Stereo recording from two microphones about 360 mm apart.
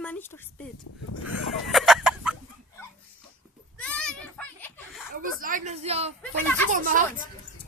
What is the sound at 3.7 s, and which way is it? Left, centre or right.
Goat, centre.